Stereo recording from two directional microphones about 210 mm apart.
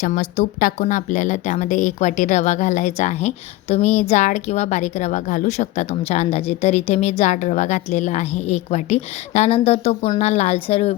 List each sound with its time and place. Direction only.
0.0 s a woman's voice: 40° left (ahead or behind)